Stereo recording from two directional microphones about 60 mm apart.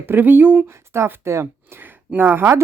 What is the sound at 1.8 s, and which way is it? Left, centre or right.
Speech, right.